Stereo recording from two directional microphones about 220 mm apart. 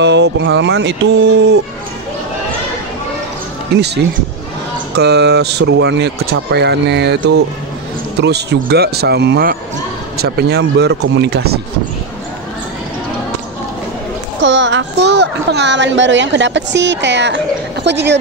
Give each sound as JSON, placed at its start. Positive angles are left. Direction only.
{"t": 0.0, "sound": "speech", "side_deg": -55}
{"t": 3.7, "sound": "speech", "side_deg": -50}
{"t": 14.4, "sound": "a child's voice", "side_deg": -55}